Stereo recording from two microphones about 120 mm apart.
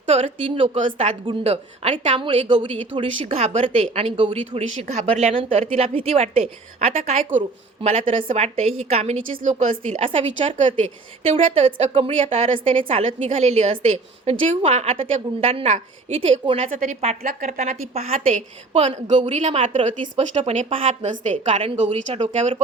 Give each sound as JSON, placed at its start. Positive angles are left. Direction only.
{"t": 0.1, "sound": "a woman's voice", "side_deg": -50}
{"t": 10.8, "sound": "a woman's voice", "side_deg": -65}
{"t": 16.7, "sound": "a woman's voice", "side_deg": -90}
{"t": 17.0, "sound": "a woman's voice", "side_deg": -65}
{"t": 19.3, "sound": "a woman's voice", "side_deg": -75}
{"t": 19.5, "sound": "a woman's voice", "side_deg": -50}